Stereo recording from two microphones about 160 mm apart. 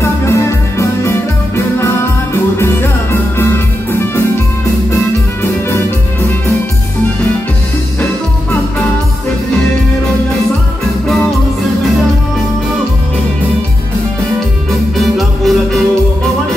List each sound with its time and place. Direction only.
0.0 s music: 15° left (ahead or behind)
4.9 s music: 15° left (ahead or behind)
15.0 s music: centre (ahead or behind)